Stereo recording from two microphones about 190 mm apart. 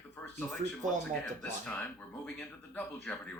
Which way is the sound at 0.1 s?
10° left (ahead or behind).